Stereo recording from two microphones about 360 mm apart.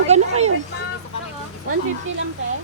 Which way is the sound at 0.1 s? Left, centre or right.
Centre.